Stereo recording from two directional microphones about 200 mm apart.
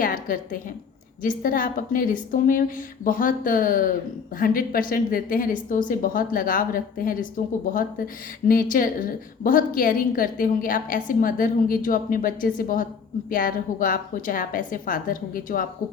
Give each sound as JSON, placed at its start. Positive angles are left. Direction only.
{"t": 0.0, "sound": "a woman's voice", "side_deg": 45}